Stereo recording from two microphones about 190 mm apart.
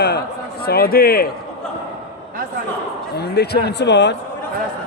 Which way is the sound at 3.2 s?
60° left (ahead or behind).